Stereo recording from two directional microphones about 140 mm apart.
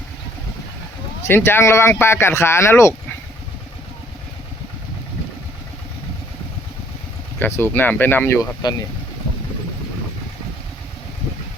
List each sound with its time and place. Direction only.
1.3 s speech: 15° left (ahead or behind)
7.3 s speech: 15° left (ahead or behind)